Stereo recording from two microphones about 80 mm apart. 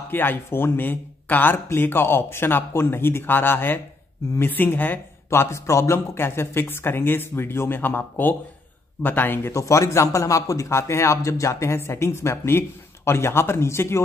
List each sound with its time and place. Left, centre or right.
0.1 s speech: left
9.5 s speech: left